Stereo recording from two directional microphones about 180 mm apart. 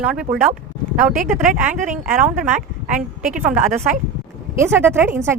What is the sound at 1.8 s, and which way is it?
Speech, 45° right (ahead or behind).